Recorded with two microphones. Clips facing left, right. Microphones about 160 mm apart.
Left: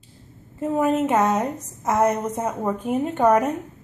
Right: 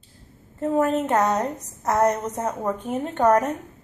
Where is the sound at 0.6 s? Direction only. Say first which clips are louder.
Left 1 dB; 5° left (ahead or behind).